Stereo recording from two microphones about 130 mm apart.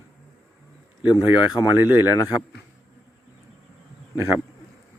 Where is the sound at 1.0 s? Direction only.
10° right (ahead or behind).